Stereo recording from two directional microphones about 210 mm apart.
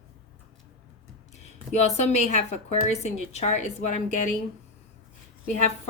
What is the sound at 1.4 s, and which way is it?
A woman's voice, 30° left (ahead or behind).